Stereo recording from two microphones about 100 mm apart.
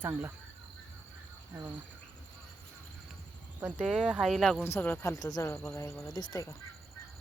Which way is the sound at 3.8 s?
Centre (ahead or behind).